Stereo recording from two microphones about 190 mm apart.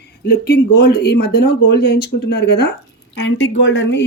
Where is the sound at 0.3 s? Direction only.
55° left (ahead or behind).